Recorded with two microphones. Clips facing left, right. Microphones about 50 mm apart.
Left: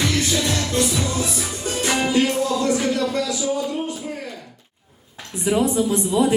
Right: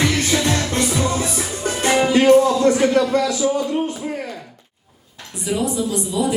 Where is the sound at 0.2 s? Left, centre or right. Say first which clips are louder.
Right 3 dB; right.